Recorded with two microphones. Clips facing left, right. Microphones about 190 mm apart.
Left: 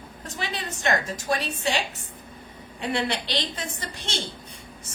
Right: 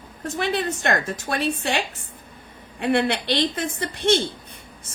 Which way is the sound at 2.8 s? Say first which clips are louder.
Right 6 dB; 55° right (ahead or behind).